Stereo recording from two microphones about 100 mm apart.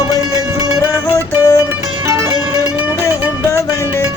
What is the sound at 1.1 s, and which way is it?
Music, 35° left (ahead or behind).